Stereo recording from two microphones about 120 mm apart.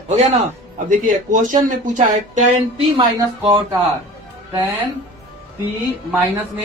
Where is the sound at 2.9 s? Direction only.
45° right (ahead or behind).